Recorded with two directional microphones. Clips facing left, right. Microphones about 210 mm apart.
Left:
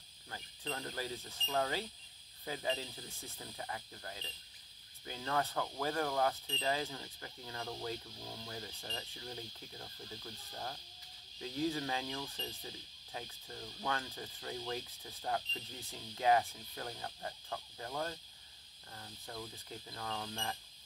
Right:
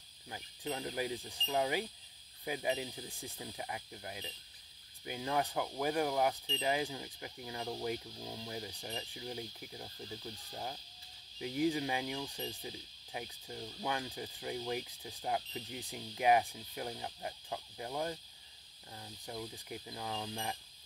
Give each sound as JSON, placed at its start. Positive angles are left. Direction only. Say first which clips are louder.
{"t": 0.3, "sound": "speech", "louder": "right 3 dB", "side_deg": -15}